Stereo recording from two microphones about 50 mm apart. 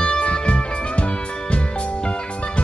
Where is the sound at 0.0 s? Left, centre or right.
Left.